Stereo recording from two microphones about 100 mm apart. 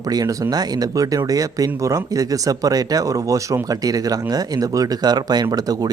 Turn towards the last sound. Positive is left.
turn(degrees=-40)  # may be behind; listen again after turning